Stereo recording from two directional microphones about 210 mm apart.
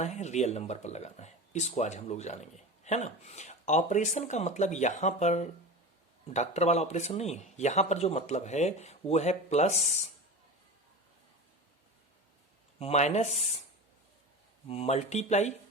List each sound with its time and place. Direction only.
0.0 s speech: 35° left (ahead or behind)
12.8 s speech: 30° left (ahead or behind)
14.7 s speech: 30° left (ahead or behind)